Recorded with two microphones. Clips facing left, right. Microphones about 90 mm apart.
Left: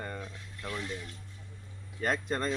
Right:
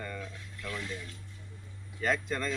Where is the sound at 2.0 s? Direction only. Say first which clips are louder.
Even; 45° left (ahead or behind).